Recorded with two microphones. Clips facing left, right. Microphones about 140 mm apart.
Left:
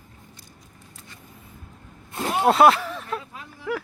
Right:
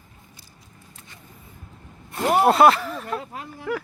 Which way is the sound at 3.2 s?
65° right (ahead or behind).